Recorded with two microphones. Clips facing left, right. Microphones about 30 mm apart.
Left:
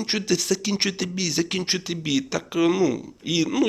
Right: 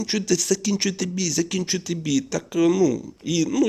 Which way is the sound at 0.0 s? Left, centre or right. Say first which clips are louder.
Right 1 dB; left.